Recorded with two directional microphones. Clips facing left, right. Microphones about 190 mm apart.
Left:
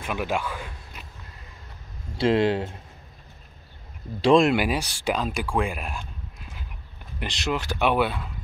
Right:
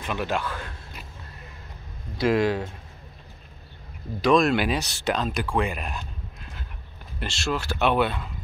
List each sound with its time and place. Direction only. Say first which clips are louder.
0.0 s speech: even; 10° left (ahead or behind)
2.1 s speech: left 1 dB; 30° left (ahead or behind)
4.2 s speech: left 2 dB; 30° left (ahead or behind)
4.5 s speech: left 1 dB; 10° left (ahead or behind)
5.9 s a sound: right 1 dB; 5° left (ahead or behind)
7.2 s speech: even; 15° left (ahead or behind)